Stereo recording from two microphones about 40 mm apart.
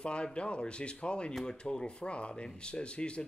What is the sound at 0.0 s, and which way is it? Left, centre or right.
Speech, left.